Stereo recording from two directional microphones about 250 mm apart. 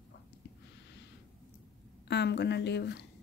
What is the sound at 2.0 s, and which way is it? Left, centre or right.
A woman's voice, left.